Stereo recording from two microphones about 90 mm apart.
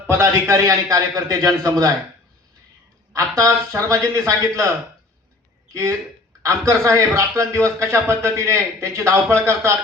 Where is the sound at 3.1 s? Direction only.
40° right (ahead or behind).